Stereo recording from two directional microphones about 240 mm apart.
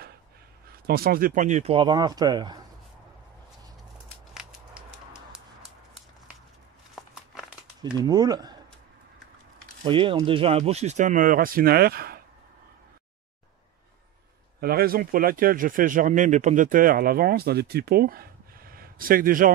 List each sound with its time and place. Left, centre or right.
0.8 s speech: right; by 2.6 s centre
4.3 s a sound: centre
7.0 s a sound: centre
7.8 s speech: centre
9.8 s a man's voice: right
14.6 s a man's voice: right